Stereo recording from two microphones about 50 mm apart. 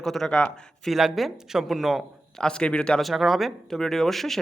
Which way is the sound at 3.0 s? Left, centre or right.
Centre.